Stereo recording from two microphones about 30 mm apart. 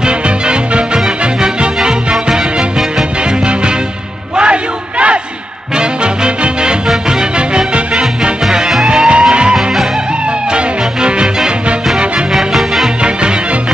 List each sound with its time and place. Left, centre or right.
0.0 s music: right
4.4 s crowd: right
5.8 s music: right
8.2 s music: centre
8.8 s music: right
12.3 s music: centre